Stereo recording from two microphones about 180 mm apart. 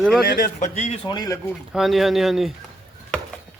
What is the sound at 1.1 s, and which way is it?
Speech, 20° left (ahead or behind).